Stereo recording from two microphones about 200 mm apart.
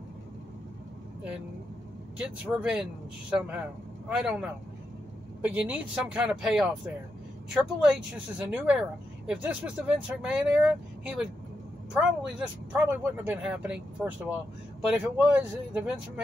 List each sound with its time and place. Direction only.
2.1 s speech: 5° right (ahead or behind)